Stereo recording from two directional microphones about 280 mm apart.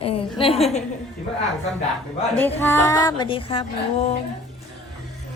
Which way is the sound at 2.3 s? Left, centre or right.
Centre.